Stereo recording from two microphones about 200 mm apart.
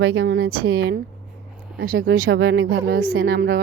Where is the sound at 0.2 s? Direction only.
50° right (ahead or behind).